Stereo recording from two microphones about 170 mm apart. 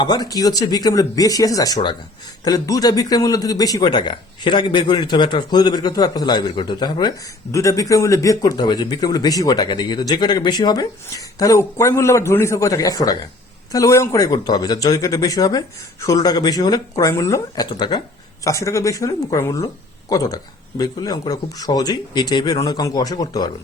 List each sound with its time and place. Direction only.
0.0 s speech: 25° left (ahead or behind)